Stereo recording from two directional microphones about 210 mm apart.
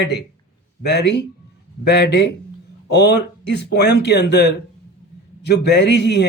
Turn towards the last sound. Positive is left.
turn(degrees=55)  # may be behind; listen again after turning